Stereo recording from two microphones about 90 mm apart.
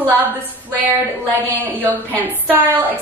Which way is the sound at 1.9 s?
20° left (ahead or behind).